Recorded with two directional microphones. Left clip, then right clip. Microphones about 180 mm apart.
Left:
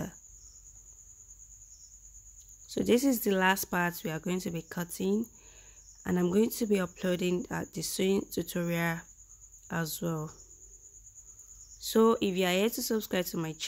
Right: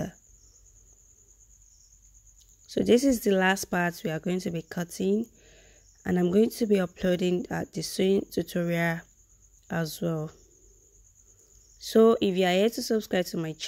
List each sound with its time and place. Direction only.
2.7 s speech: 15° right (ahead or behind)
11.8 s speech: 15° right (ahead or behind)